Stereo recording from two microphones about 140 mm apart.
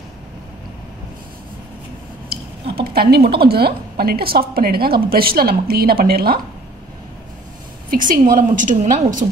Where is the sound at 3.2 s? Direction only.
90° right.